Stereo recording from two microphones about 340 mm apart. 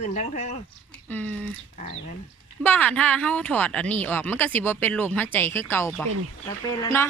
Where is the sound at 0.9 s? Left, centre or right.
Centre.